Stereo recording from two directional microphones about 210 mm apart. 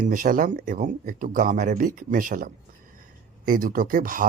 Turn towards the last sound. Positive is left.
turn(degrees=-40)  # may be behind; listen again after turning